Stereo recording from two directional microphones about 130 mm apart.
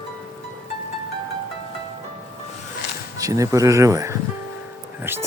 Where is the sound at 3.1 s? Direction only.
25° right (ahead or behind).